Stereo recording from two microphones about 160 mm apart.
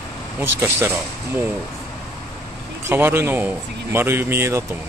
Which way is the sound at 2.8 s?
15° right (ahead or behind).